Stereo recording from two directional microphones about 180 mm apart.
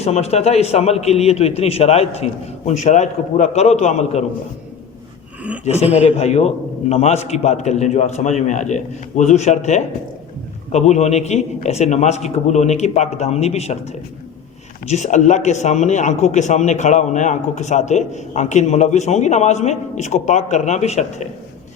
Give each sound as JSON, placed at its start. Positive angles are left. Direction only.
{"t": 0.0, "sound": "speech", "side_deg": 35}
{"t": 5.6, "sound": "speech", "side_deg": 35}